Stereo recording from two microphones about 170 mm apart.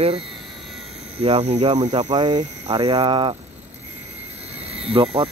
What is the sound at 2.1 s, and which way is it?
Speech, 25° right (ahead or behind).